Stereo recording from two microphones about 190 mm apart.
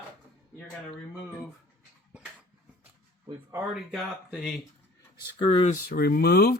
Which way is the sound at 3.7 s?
Centre (ahead or behind).